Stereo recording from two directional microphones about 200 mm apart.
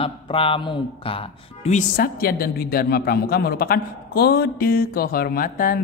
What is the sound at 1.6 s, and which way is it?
A woman's voice, 40° left (ahead or behind).